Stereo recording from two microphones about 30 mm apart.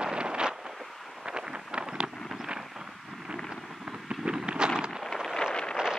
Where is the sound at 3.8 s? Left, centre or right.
Right.